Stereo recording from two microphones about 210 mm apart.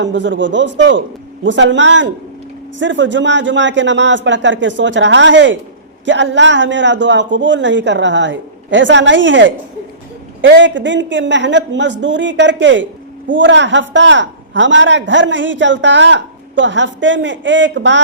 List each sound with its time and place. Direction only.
0.0 s a man's voice: 60° right (ahead or behind)